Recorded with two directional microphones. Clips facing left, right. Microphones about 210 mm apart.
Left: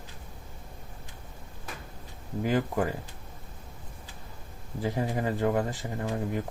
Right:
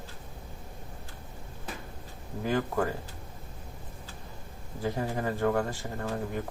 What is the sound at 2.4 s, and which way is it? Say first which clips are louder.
Speech: left 1 dB; 15° left (ahead or behind).